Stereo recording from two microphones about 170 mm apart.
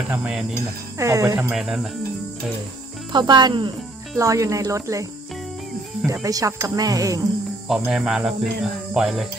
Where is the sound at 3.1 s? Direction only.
25° right (ahead or behind).